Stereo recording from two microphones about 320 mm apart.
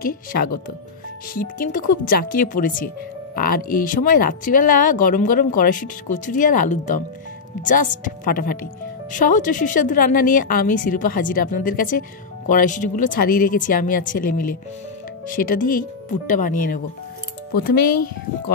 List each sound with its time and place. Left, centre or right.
0.0 s speech: left
17.6 s speech: left